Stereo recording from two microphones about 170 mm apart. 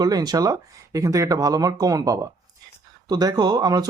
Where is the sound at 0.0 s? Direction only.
25° right (ahead or behind).